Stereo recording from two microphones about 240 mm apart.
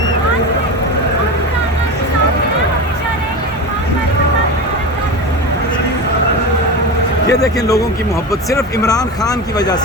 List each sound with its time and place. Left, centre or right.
7.3 s speech: centre